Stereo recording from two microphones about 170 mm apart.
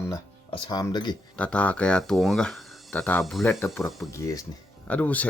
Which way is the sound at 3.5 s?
15° left (ahead or behind).